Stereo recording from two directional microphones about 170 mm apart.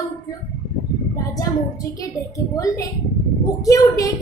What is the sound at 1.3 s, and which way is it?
A woman's voice, 20° left (ahead or behind).